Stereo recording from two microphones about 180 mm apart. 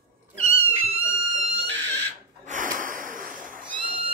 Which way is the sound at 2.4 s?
45° right (ahead or behind).